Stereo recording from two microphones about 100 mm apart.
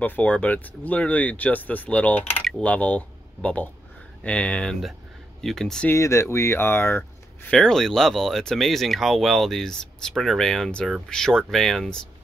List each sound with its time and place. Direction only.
0.0 s speech: 15° left (ahead or behind)
5.9 s speech: 30° left (ahead or behind)
7.5 s speech: 5° left (ahead or behind)